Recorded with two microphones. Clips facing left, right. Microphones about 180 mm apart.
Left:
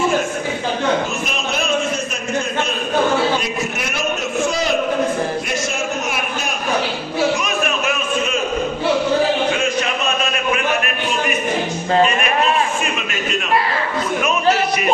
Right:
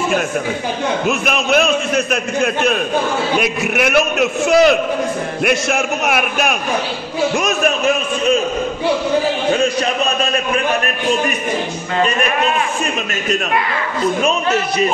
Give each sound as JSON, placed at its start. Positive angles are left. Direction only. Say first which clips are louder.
{"t": 1.0, "sound": "a man's voice", "louder": "right 6 dB", "side_deg": -70}
{"t": 3.3, "sound": "a man's voice", "louder": "right 5 dB", "side_deg": -65}
{"t": 7.3, "sound": "a sound", "louder": "right 4 dB", "side_deg": -45}